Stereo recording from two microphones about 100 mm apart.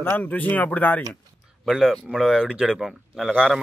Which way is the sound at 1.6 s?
Centre (ahead or behind).